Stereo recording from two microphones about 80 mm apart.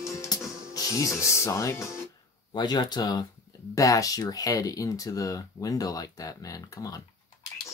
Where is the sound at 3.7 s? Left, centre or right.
Left.